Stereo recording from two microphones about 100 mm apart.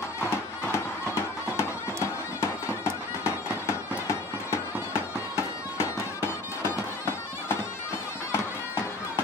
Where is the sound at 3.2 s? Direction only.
25° left (ahead or behind).